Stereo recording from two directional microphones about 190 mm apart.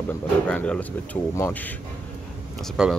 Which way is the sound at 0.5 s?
5° left (ahead or behind).